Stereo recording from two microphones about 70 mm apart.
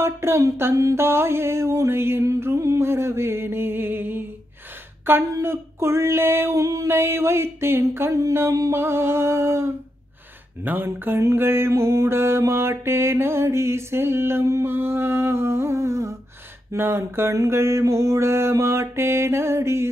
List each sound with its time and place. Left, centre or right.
0.0 s mantra: right
2.2 s mantra: right
5.1 s speech: right
5.4 s mantra: right
6.5 s music: right
6.9 s mantra: right
8.3 s music: right
8.7 s mantra: right
10.6 s speech: right
11.3 s mantra: right
16.7 s mantra: right
17.3 s music: right
17.6 s mantra: right